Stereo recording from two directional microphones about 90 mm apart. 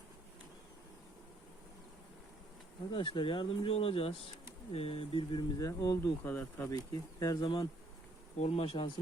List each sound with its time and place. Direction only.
2.9 s speech: 70° left (ahead or behind); by 5.4 s 85° left
5.4 s speech: 40° left (ahead or behind)
6.2 s speech: 20° left (ahead or behind)
6.7 s speech: 45° left (ahead or behind)
7.4 s speech: 70° left (ahead or behind)
8.6 s speech: 90° left